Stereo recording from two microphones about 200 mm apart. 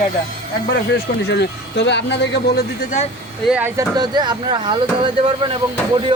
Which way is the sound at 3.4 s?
5° right (ahead or behind).